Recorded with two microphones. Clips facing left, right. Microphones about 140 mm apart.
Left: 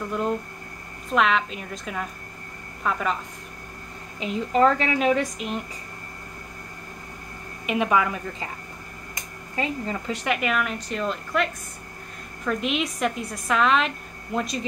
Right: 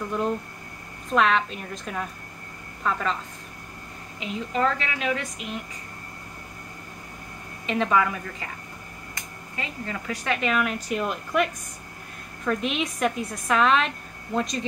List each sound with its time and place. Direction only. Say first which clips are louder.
1.1 s a woman's voice: even; centre (ahead or behind)
4.2 s a woman's voice: left 5 dB; 35° left (ahead or behind)
7.6 s a woman's voice: left 1 dB; 15° left (ahead or behind)
9.6 s a woman's voice: left 6 dB; 30° left (ahead or behind)
10.5 s a woman's voice: right 1 dB; centre (ahead or behind)
11.0 s a woman's voice: even; 15° right (ahead or behind)
12.4 s a woman's voice: even; centre (ahead or behind)